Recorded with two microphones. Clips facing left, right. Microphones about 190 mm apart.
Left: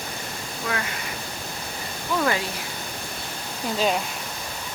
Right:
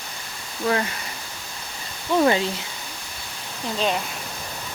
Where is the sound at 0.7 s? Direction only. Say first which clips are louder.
Right 7 dB; 35° right (ahead or behind).